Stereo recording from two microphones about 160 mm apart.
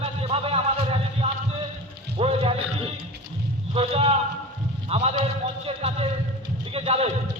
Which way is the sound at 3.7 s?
35° right (ahead or behind).